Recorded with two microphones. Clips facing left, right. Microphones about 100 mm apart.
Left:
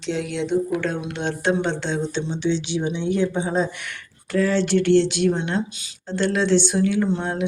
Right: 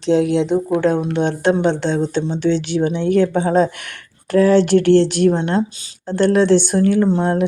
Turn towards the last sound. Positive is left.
turn(degrees=-40)  # may be behind; listen again after turning